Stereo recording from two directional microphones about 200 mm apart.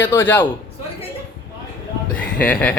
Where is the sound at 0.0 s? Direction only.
10° left (ahead or behind).